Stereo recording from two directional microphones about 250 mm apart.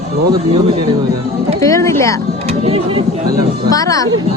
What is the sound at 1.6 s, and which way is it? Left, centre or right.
Speech, centre.